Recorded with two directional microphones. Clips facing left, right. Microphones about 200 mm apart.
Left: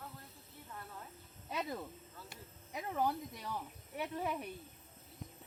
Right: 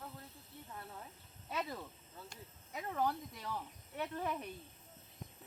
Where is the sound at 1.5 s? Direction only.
15° left (ahead or behind).